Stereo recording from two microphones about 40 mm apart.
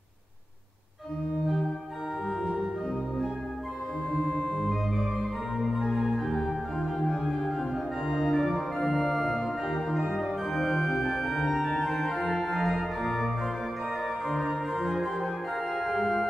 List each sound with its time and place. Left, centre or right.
2.4 s organ: centre
4.2 s organ: left
4.6 s organ: centre
8.5 s organ: centre
14.5 s organ: centre